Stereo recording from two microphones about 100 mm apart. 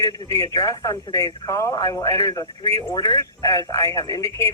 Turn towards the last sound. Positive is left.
turn(degrees=30)  # may be behind; listen again after turning